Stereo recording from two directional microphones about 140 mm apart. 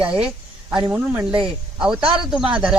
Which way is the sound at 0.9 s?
15° right (ahead or behind).